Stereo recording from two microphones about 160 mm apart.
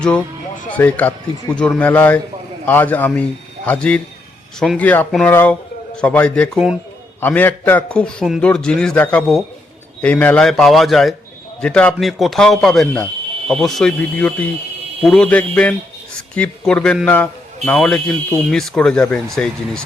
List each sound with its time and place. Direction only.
0.7 s a man's voice: 10° left (ahead or behind)